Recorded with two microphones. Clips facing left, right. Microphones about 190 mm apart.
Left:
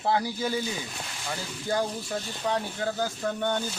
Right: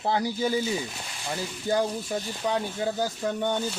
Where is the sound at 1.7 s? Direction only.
15° right (ahead or behind).